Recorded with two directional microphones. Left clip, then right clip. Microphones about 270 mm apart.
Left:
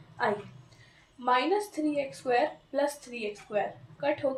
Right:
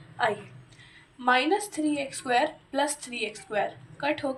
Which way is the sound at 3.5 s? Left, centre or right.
Centre.